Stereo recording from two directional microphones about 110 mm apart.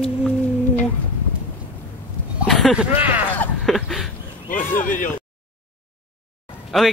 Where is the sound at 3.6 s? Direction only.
Centre (ahead or behind).